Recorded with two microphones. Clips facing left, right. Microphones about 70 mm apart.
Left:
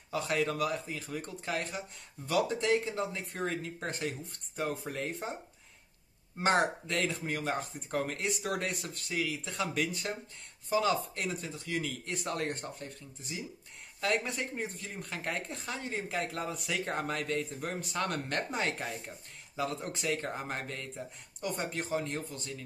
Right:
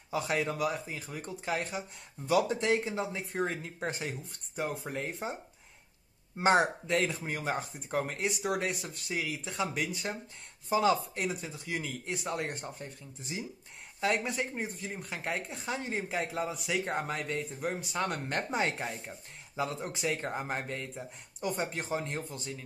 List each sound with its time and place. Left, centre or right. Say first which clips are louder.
0.1 s speech: even; centre
6.4 s speech: right 2 dB; centre
10.7 s speech: right 2 dB; right
14.0 s speech: right 1 dB; centre